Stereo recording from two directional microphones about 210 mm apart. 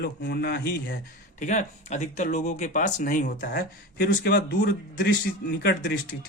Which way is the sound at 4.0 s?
50° left (ahead or behind).